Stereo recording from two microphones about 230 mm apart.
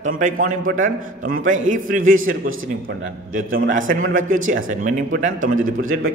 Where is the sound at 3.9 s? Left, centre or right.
Right.